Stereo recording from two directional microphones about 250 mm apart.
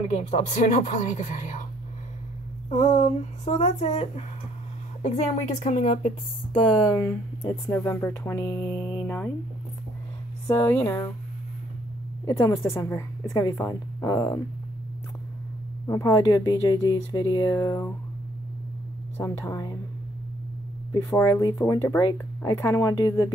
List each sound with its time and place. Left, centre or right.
0.1 s speech: left
2.7 s speech: left
9.0 s a sound: centre
10.4 s speech: centre
12.3 s speech: centre
15.9 s speech: centre
19.1 s speech: centre
20.9 s speech: centre